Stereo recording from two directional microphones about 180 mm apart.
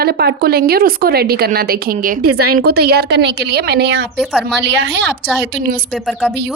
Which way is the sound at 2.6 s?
60° right (ahead or behind).